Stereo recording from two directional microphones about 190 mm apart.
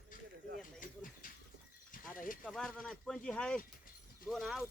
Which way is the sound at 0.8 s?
45° left (ahead or behind).